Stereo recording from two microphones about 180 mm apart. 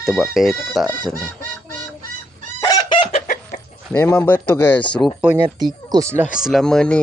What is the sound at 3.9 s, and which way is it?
Speech, 10° left (ahead or behind).